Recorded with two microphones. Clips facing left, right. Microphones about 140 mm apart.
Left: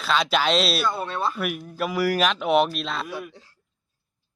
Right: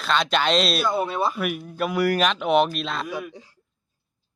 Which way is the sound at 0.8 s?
10° right (ahead or behind).